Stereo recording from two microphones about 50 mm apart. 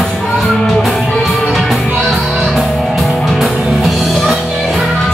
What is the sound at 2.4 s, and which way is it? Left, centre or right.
Music, centre.